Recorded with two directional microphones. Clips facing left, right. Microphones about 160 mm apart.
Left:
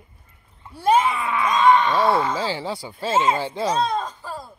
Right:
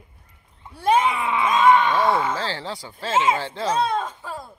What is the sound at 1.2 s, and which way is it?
Speech, 20° right (ahead or behind).